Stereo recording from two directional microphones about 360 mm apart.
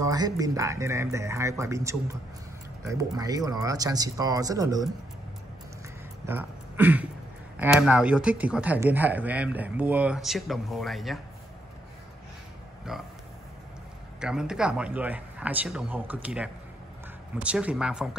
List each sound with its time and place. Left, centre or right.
0.0 s speech: centre
6.2 s speech: centre
14.2 s speech: centre